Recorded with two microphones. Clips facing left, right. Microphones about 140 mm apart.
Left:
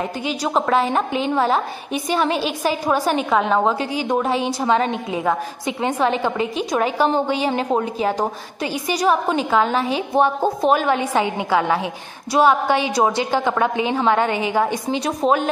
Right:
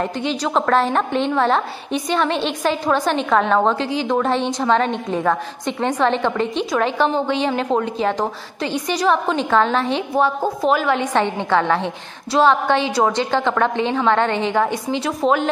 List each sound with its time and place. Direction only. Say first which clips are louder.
0.0 s a woman's voice: right 2 dB; 10° left (ahead or behind)
10.1 s a woman's voice: left 2 dB; 20° left (ahead or behind)